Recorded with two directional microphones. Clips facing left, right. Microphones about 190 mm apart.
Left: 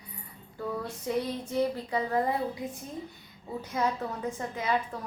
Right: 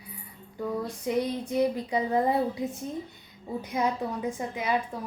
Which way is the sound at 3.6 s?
15° right (ahead or behind).